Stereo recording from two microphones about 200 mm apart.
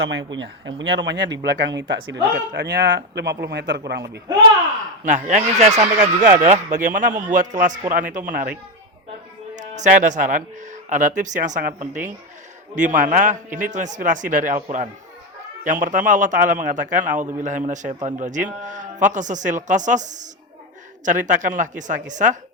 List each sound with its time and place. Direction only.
0.0 s speech: 70° right (ahead or behind)
5.0 s a man's voice: 35° right (ahead or behind)
9.6 s a man's voice: 35° right (ahead or behind)